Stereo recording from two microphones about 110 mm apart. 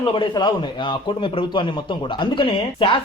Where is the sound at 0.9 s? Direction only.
50° left (ahead or behind).